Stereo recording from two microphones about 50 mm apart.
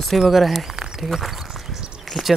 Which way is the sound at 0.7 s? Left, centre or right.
Centre.